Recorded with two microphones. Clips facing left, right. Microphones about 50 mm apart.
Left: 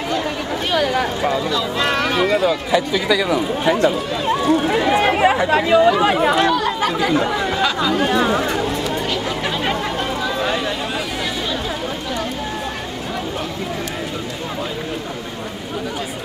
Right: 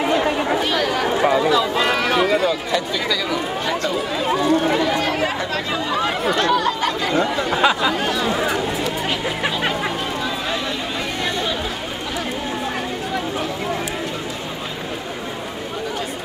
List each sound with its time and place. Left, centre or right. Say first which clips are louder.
0.0 s chatter: right 4 dB; right
0.6 s chatter: left 1 dB; centre
1.1 s speech: right 3 dB; centre
4.8 s speech: left 5 dB; left
6.5 s chatter: even; centre
7.5 s speech: right 6 dB; centre
8.4 s chatter: left 1 dB; centre